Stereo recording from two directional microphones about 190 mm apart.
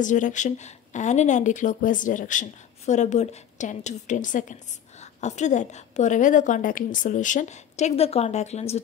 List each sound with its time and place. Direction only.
0.0 s speech: 40° left (ahead or behind)